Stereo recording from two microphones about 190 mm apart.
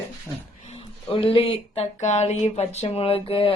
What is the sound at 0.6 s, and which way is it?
Speech, 30° left (ahead or behind).